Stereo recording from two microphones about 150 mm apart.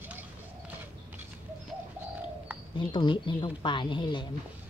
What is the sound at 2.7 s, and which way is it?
Speech, 30° left (ahead or behind).